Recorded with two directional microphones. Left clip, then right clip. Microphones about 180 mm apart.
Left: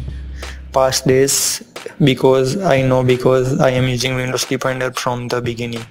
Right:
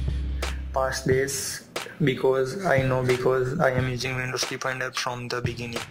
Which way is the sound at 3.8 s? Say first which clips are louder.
Left 9 dB; 20° left (ahead or behind).